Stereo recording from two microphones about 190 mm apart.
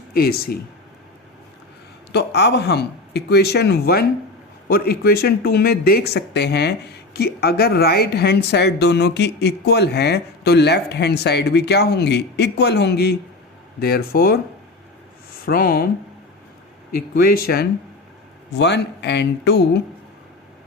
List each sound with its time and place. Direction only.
0.1 s speech: 55° left (ahead or behind)
2.1 s speech: 60° left (ahead or behind)
15.4 s speech: 50° left (ahead or behind)
16.9 s speech: 55° left (ahead or behind)